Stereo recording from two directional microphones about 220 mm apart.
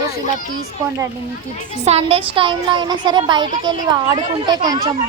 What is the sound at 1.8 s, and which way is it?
Speech, 30° right (ahead or behind).